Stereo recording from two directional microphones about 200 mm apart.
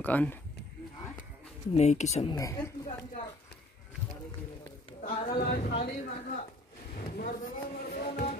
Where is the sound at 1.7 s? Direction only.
35° left (ahead or behind).